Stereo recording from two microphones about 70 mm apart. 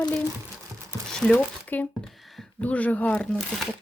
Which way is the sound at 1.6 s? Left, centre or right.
Left.